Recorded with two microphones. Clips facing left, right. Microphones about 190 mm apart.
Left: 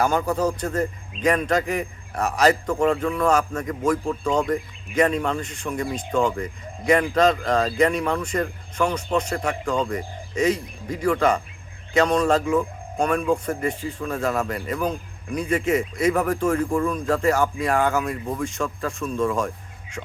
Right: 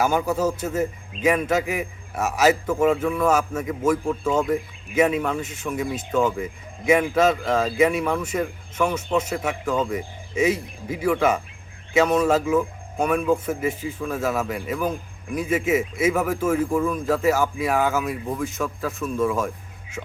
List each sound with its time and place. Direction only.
0.0 s a man's voice: 5° right (ahead or behind)